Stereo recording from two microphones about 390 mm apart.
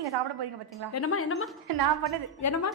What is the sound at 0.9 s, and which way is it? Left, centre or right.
Speech, left.